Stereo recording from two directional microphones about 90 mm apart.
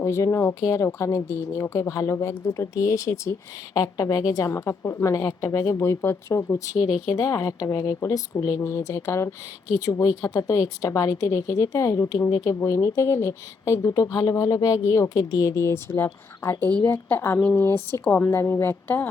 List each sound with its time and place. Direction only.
0.0 s a woman's voice: 35° left (ahead or behind)